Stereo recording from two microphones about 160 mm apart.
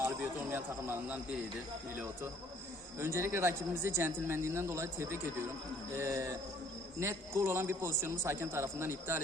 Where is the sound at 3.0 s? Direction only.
15° right (ahead or behind).